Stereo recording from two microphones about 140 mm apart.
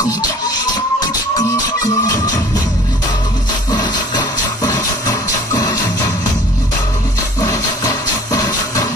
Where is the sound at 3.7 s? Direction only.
30° left (ahead or behind).